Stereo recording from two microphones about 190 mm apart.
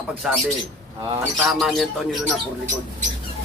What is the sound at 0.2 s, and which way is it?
Speech, centre (ahead or behind).